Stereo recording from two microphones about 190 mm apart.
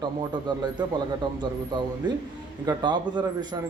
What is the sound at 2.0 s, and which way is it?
A man's voice, 25° right (ahead or behind).